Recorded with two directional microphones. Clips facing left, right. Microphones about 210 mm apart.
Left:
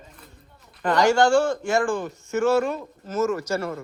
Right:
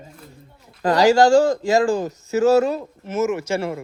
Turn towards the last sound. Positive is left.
turn(degrees=-25)  # may be behind; listen again after turning